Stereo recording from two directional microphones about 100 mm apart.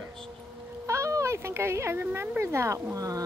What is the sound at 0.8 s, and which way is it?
Speech, 30° right (ahead or behind).